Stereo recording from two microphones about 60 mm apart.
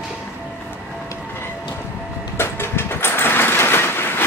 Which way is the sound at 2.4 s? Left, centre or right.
Left.